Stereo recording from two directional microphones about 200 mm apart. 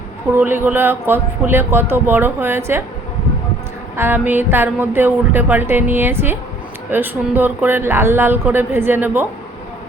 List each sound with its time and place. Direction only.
0.3 s speech: 10° right (ahead or behind)
3.9 s speech: 10° right (ahead or behind)